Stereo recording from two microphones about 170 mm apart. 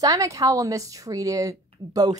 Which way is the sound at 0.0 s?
20° right (ahead or behind).